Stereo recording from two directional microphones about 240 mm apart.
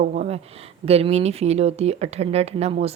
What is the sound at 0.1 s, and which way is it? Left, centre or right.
Speech, right.